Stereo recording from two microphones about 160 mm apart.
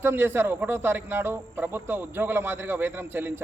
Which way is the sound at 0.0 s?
15° right (ahead or behind).